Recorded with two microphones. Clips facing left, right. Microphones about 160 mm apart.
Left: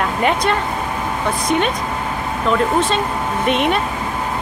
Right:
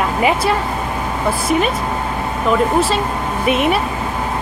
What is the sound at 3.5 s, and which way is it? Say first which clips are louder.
Speech: right 2 dB; 5° right (ahead or behind).